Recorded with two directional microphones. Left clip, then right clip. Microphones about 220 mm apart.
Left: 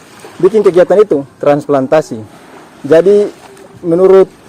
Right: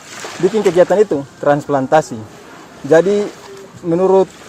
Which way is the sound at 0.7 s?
15° left (ahead or behind).